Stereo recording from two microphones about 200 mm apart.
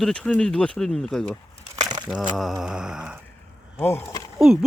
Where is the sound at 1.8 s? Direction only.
20° right (ahead or behind).